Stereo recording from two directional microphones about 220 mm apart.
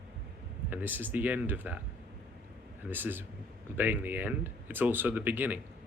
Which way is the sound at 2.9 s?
10° right (ahead or behind).